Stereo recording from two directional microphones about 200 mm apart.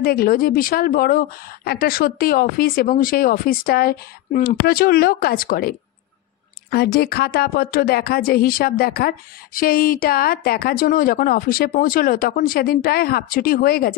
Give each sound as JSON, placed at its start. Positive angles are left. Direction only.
{"t": 0.0, "sound": "speech", "side_deg": 50}